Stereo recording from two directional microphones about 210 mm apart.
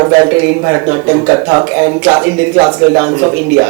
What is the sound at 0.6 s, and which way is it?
Speech, 20° right (ahead or behind).